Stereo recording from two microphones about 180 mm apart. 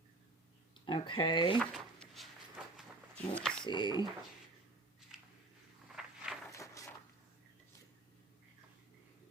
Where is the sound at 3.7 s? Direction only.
25° left (ahead or behind).